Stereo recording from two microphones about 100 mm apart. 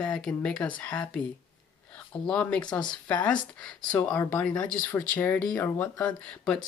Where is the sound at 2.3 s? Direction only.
10° left (ahead or behind).